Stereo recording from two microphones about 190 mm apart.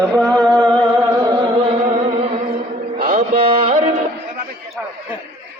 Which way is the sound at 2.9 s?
45° right (ahead or behind).